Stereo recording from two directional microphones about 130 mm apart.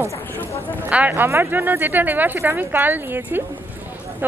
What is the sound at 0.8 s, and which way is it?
Speech, 10° right (ahead or behind).